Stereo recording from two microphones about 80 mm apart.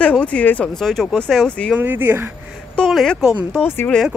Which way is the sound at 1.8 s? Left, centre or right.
Right.